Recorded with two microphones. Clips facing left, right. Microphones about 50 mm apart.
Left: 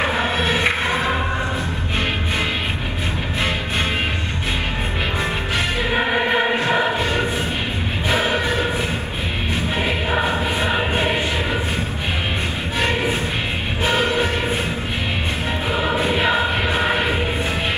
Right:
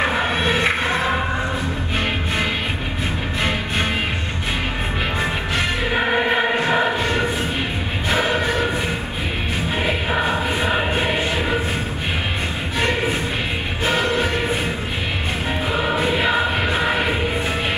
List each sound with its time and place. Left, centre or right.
0.7 s music: centre
5.9 s music: centre
10.2 s music: centre
10.7 s a sound: centre
13.9 s music: left
15.7 s music: centre